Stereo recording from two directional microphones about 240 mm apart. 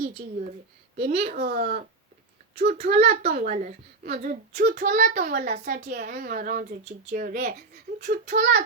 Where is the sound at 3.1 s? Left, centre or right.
Right.